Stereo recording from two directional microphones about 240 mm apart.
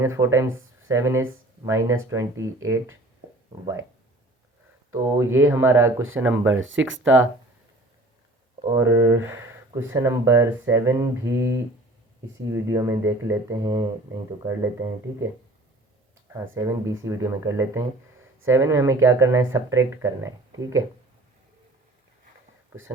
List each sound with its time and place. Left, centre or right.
0.0 s speech: centre
4.9 s speech: centre
6.5 s speech: right
8.7 s speech: centre
12.6 s speech: centre
16.3 s speech: centre